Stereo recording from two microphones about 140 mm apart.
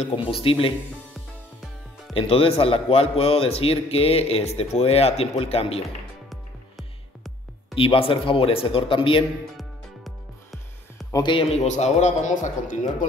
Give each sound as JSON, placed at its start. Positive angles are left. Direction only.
{"t": 0.0, "sound": "a man's voice", "side_deg": 40}
{"t": 2.1, "sound": "a man's voice", "side_deg": 40}
{"t": 7.7, "sound": "a man's voice", "side_deg": 40}
{"t": 9.6, "sound": "music", "side_deg": 0}
{"t": 11.2, "sound": "a man's voice", "side_deg": 40}